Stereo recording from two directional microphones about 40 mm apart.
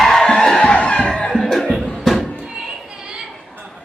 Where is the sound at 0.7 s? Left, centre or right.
Left.